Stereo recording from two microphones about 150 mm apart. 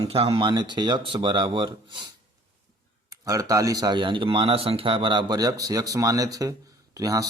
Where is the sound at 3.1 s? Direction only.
20° right (ahead or behind).